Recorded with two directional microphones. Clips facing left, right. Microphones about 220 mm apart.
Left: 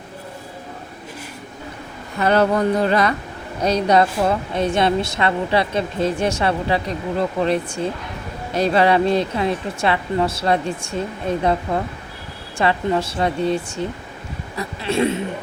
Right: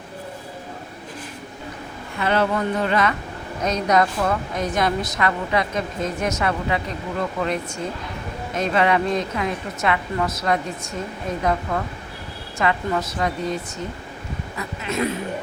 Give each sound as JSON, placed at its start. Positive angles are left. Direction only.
{"t": 2.1, "sound": "a woman's voice", "side_deg": 40}